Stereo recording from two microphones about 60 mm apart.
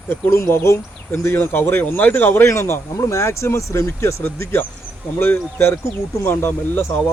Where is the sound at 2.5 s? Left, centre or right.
Left.